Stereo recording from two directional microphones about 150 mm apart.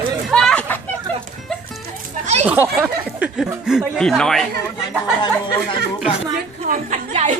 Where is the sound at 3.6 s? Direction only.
5° right (ahead or behind).